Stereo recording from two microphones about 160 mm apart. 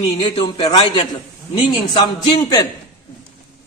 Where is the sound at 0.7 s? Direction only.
35° left (ahead or behind).